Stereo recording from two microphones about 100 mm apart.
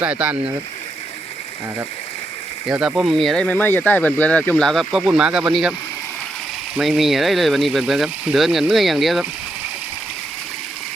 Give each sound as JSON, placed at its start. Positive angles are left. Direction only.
{"t": 0.0, "sound": "speech", "side_deg": -10}
{"t": 2.6, "sound": "speech", "side_deg": -10}
{"t": 3.4, "sound": "speech", "side_deg": 15}
{"t": 4.7, "sound": "speech", "side_deg": 0}
{"t": 6.7, "sound": "speech", "side_deg": -5}